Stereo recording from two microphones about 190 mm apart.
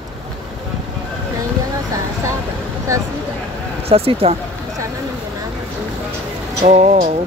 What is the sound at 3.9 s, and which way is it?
Speech, 30° right (ahead or behind).